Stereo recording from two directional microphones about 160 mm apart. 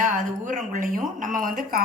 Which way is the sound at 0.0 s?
55° right (ahead or behind).